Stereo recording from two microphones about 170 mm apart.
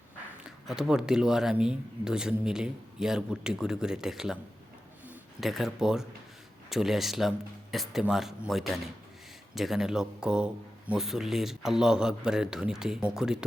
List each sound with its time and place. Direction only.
0.4 s speech: 5° right (ahead or behind)
5.4 s speech: centre (ahead or behind)